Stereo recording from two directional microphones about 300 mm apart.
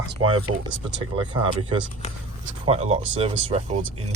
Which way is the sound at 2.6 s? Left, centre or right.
Right.